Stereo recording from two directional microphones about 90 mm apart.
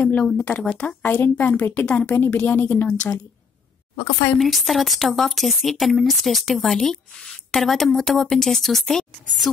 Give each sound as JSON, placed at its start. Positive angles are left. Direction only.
{"t": 0.1, "sound": "a woman's voice", "side_deg": 15}
{"t": 4.4, "sound": "speech", "side_deg": 0}